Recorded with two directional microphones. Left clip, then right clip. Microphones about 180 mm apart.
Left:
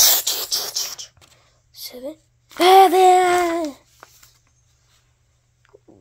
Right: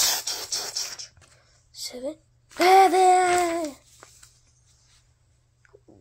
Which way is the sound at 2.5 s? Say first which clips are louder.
Left 5 dB; 20° left (ahead or behind).